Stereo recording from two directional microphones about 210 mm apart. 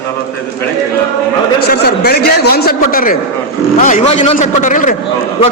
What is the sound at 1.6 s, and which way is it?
A man's voice, 50° left (ahead or behind).